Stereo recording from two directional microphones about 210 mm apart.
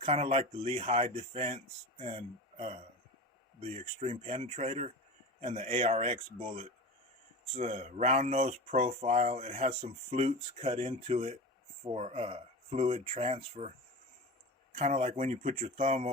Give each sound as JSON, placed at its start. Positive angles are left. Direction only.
{"t": 0.0, "sound": "speech", "side_deg": -30}
{"t": 14.8, "sound": "speech", "side_deg": -35}